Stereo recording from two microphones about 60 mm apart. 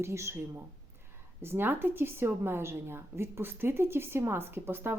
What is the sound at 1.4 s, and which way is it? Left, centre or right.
A woman's voice, right.